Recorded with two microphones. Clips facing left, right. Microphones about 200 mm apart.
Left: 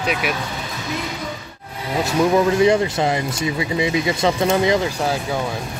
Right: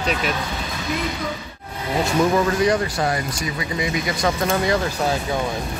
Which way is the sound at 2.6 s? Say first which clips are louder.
Left 4 dB; 25° left (ahead or behind).